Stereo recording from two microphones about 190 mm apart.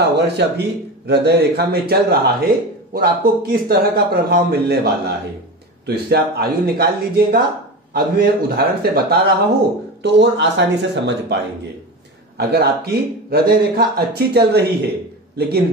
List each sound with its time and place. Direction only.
0.0 s a man's voice: 65° right (ahead or behind)
10.0 s speech: 65° right (ahead or behind)